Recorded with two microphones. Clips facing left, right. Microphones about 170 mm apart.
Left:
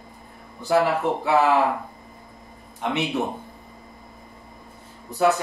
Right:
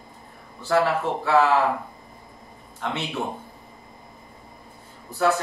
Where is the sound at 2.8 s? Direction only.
15° left (ahead or behind).